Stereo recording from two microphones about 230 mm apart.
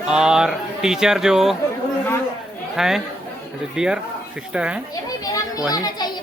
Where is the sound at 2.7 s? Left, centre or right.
Centre.